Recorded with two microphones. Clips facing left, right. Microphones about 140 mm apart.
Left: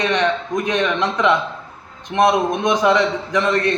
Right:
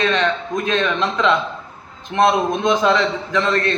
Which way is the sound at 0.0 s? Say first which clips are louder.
Even; 15° left (ahead or behind).